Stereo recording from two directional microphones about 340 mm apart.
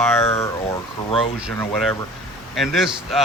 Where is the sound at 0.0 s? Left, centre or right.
Centre.